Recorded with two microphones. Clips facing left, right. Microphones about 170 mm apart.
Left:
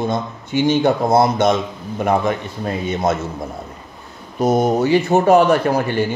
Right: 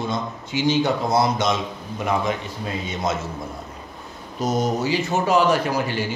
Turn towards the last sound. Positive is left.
turn(degrees=55)  # may be behind; listen again after turning